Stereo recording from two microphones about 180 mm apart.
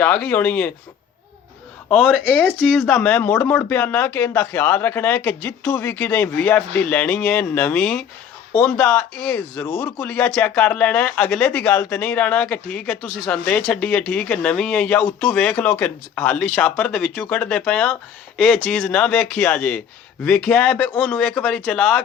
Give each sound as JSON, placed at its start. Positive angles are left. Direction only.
{"t": 0.0, "sound": "speech", "side_deg": 5}
{"t": 1.9, "sound": "speech", "side_deg": 5}